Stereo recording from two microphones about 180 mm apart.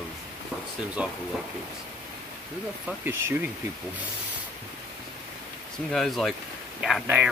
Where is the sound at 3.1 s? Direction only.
10° right (ahead or behind).